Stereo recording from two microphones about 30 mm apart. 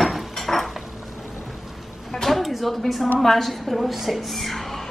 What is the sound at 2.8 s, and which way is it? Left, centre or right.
Speech, centre.